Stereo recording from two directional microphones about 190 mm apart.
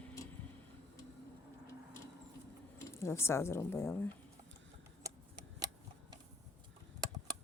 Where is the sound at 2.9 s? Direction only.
15° left (ahead or behind).